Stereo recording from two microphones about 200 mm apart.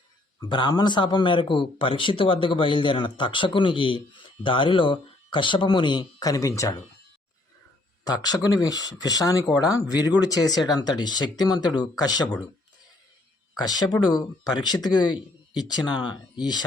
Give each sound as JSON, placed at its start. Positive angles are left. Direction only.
{"t": 0.3, "sound": "a man's voice", "side_deg": 25}
{"t": 8.0, "sound": "a man's voice", "side_deg": 20}
{"t": 13.6, "sound": "a man's voice", "side_deg": 20}